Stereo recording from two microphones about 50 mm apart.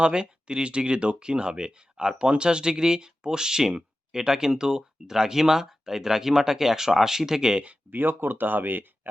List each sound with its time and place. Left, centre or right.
0.0 s speech: centre
7.9 s speech: right